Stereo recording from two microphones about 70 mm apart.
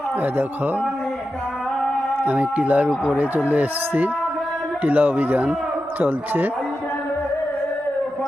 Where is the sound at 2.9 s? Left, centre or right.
Centre.